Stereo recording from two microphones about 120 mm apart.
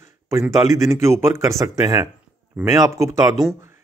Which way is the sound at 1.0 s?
20° right (ahead or behind).